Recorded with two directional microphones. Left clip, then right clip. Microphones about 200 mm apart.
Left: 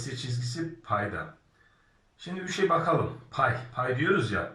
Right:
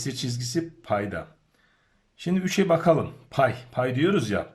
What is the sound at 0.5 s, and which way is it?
Speech, 30° right (ahead or behind).